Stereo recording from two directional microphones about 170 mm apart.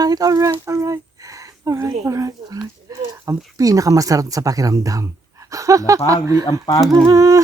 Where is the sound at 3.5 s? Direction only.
20° right (ahead or behind).